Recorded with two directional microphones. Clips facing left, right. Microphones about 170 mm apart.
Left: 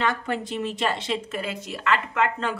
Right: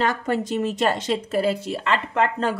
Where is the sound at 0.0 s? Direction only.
40° right (ahead or behind).